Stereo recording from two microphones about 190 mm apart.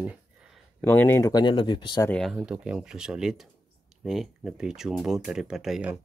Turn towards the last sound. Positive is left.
turn(degrees=-5)  # may be behind; listen again after turning